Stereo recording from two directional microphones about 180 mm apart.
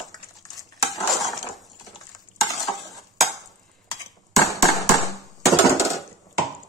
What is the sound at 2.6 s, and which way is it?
Stir, centre (ahead or behind).